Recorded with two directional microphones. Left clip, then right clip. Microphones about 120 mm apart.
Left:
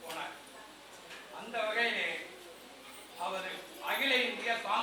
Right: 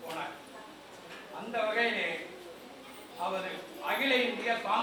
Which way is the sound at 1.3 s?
15° right (ahead or behind).